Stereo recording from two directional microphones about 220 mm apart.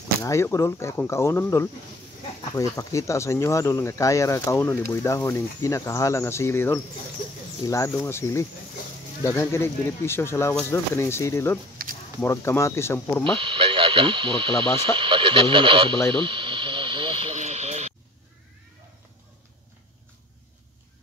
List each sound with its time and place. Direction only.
0.2 s speech: 15° left (ahead or behind)
13.2 s speech: 25° right (ahead or behind)
16.1 s a sound: 20° right (ahead or behind)